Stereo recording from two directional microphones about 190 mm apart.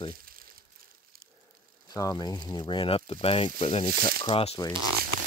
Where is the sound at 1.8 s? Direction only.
20° left (ahead or behind).